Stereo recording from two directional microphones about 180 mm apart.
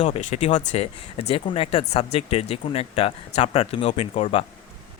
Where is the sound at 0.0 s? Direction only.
40° left (ahead or behind).